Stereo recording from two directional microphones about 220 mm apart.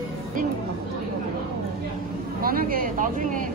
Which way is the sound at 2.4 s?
40° right (ahead or behind).